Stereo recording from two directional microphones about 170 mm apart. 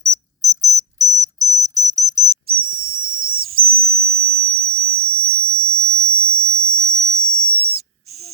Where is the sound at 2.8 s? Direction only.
55° right (ahead or behind).